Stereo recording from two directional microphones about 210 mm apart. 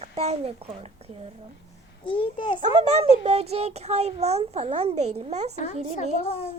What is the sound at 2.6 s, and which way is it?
A child's voice, 30° right (ahead or behind).